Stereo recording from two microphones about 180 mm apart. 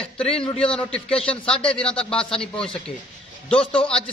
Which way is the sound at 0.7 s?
5° left (ahead or behind).